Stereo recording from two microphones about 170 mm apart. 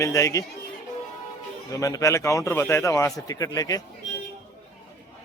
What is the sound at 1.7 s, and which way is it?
A man's voice, 20° left (ahead or behind).